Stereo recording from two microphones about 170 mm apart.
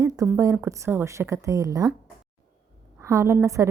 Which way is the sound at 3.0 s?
15° right (ahead or behind).